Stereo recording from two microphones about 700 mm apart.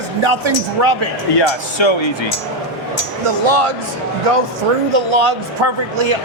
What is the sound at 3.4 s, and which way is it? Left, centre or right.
Speech, right.